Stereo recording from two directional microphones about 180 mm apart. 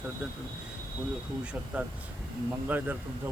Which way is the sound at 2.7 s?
10° right (ahead or behind).